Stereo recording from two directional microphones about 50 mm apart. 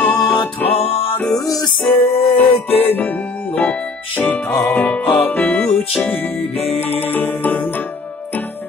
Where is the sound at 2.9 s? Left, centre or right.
Left.